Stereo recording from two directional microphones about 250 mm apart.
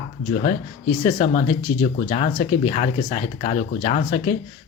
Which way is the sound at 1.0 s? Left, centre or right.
Left.